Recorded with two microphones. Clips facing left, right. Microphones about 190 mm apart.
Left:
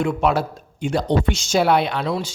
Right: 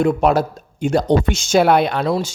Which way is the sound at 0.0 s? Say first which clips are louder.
Right 4 dB; 40° right (ahead or behind).